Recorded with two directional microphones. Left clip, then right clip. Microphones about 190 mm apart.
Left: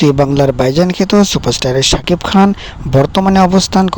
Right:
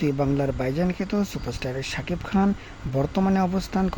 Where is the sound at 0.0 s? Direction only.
40° left (ahead or behind).